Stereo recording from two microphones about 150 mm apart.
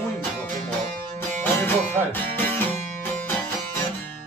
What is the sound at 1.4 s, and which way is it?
Music, 15° left (ahead or behind).